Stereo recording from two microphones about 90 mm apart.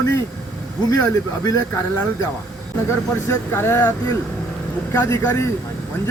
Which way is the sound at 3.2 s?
30° left (ahead or behind).